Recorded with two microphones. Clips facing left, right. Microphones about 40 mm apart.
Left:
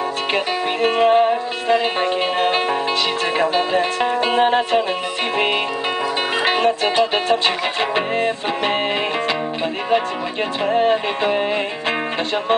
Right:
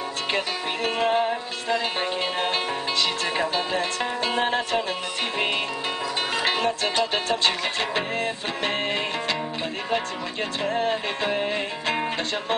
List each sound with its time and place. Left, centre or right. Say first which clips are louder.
0.8 s music: left 8 dB; centre
6.4 s music: left 8 dB; centre
10.6 s music: left 8 dB; centre